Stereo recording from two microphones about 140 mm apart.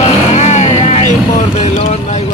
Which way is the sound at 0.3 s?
50° left (ahead or behind).